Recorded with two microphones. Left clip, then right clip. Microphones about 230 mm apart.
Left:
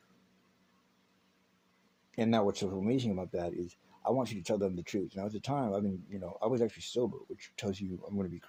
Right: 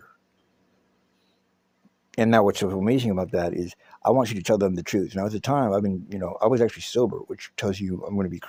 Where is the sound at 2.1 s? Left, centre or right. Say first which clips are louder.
Right 11 dB; right.